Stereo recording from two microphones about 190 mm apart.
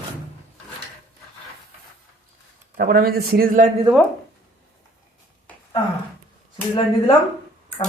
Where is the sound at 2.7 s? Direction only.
55° right (ahead or behind).